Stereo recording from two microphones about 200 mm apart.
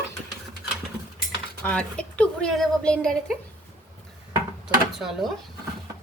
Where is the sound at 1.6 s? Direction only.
5° left (ahead or behind).